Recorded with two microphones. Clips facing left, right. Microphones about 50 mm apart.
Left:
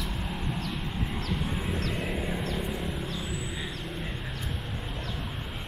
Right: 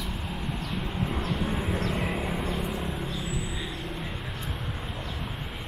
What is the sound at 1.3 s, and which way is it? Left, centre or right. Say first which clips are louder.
Vehicle: right 2 dB; centre.